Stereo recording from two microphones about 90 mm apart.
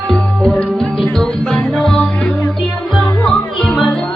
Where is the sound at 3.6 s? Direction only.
5° left (ahead or behind).